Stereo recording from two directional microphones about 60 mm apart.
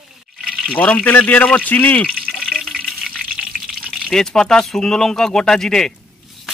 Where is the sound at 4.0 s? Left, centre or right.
Centre.